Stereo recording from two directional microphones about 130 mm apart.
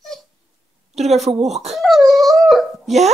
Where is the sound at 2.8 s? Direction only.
60° right (ahead or behind).